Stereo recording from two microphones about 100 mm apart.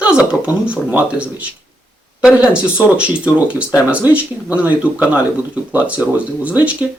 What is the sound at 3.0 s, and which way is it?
Speech, 10° right (ahead or behind).